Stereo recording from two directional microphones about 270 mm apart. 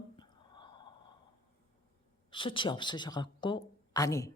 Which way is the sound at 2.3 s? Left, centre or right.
Centre.